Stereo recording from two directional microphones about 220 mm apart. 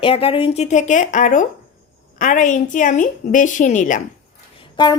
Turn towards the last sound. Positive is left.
turn(degrees=20)  # may be behind; listen again after turning